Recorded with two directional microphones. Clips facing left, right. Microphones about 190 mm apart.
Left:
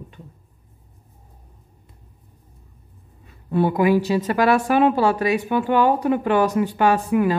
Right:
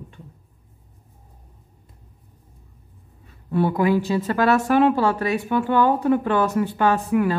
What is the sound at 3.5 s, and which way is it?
Speech, 15° left (ahead or behind).